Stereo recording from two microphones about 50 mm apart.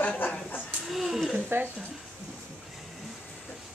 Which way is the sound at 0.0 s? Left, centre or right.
Left.